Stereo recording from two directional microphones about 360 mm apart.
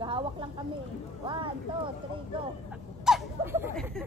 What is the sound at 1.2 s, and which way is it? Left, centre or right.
Speech, centre.